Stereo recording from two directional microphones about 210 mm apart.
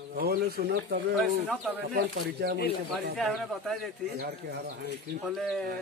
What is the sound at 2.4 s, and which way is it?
Speech, 55° right (ahead or behind).